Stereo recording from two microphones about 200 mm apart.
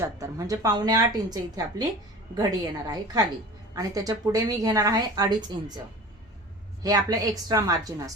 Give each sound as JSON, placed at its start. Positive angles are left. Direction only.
{"t": 0.0, "sound": "a woman's voice", "side_deg": -15}
{"t": 6.8, "sound": "a woman's voice", "side_deg": -20}